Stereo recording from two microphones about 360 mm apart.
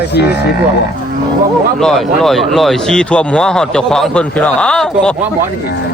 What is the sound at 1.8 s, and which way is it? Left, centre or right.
Speech, centre.